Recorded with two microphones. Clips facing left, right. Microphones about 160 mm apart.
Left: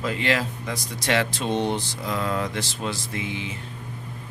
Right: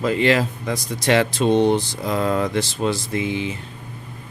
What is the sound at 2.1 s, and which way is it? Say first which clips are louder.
Speech: right 6 dB; 40° right (ahead or behind).